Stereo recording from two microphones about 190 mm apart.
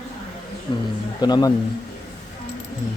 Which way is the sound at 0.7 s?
25° left (ahead or behind).